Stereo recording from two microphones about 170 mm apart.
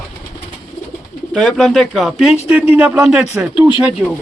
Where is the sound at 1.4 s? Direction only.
5° left (ahead or behind).